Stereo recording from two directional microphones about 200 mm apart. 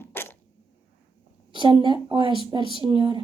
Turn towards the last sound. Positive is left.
turn(degrees=-25)  # may be behind; listen again after turning